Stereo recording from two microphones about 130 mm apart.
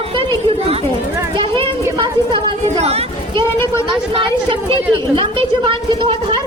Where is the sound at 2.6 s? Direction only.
50° right (ahead or behind).